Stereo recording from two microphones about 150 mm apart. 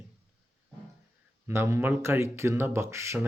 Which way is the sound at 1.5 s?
15° right (ahead or behind).